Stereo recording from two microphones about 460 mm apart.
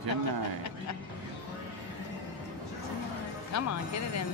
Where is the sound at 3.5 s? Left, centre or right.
Left.